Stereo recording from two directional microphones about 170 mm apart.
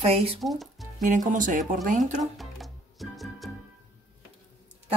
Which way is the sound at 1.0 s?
50° right (ahead or behind).